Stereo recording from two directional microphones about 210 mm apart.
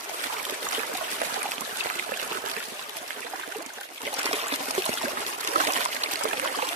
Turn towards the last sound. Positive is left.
turn(degrees=-40)  # may be behind; listen again after turning